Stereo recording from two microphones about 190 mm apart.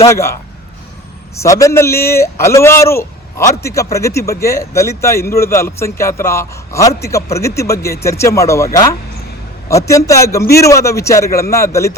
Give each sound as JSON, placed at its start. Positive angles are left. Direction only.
{"t": 0.1, "sound": "a man's voice", "side_deg": 15}
{"t": 1.4, "sound": "a man's voice", "side_deg": 15}